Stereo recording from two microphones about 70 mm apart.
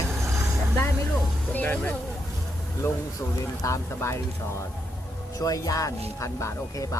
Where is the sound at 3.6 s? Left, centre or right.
Left.